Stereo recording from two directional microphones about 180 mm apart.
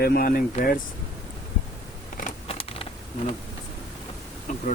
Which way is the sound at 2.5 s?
30° left (ahead or behind).